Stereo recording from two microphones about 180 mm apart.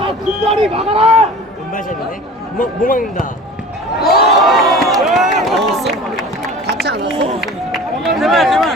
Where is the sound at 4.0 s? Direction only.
60° left (ahead or behind).